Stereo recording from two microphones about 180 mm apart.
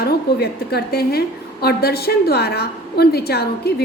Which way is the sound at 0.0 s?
60° left (ahead or behind).